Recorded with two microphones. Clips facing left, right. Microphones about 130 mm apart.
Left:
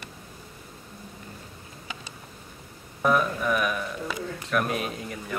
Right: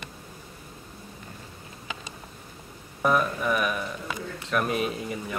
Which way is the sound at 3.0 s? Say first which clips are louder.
Even; centre (ahead or behind).